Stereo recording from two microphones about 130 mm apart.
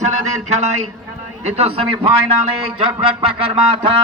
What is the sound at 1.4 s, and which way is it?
Speech, 50° right (ahead or behind).